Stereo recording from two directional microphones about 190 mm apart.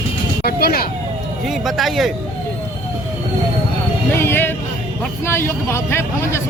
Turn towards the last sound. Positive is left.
turn(degrees=15)  # may be behind; listen again after turning